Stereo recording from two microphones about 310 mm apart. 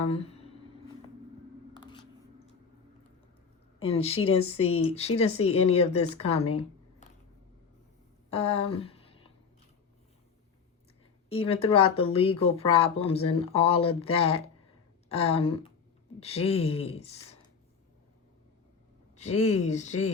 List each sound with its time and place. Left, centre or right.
0.1 s speech: centre
1.8 s a sound: centre
3.8 s speech: centre
8.3 s speech: centre
8.7 s a sound: centre
11.3 s speech: centre
19.1 s speech: left